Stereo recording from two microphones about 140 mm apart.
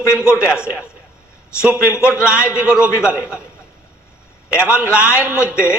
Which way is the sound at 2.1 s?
20° left (ahead or behind).